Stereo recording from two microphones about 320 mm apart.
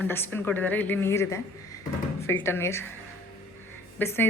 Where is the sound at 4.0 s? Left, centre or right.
Centre.